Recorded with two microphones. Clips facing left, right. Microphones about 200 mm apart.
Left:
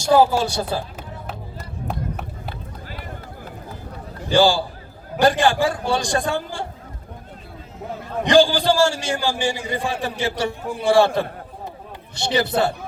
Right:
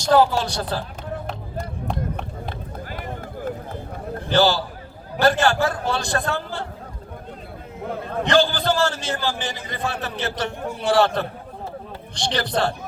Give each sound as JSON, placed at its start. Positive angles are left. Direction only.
{"t": 0.0, "sound": "a man's voice", "side_deg": 10}
{"t": 2.7, "sound": "run", "side_deg": -50}
{"t": 4.3, "sound": "a man's voice", "side_deg": 10}
{"t": 7.9, "sound": "a sound", "side_deg": -55}
{"t": 8.2, "sound": "a man's voice", "side_deg": 15}